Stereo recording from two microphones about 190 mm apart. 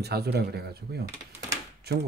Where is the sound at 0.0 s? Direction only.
60° right (ahead or behind).